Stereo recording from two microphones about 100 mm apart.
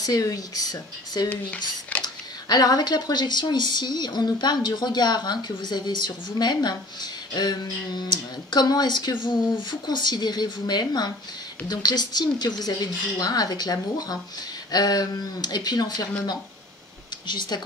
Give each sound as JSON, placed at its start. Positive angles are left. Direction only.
{"t": 0.0, "sound": "speech", "side_deg": 35}
{"t": 1.9, "sound": "a sound", "side_deg": 15}
{"t": 2.4, "sound": "speech", "side_deg": 40}
{"t": 17.3, "sound": "speech", "side_deg": 50}